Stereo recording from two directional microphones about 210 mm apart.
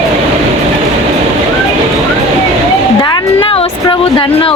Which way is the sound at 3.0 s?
25° left (ahead or behind).